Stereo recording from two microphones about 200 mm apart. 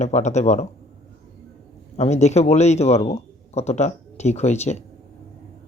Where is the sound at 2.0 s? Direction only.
35° left (ahead or behind).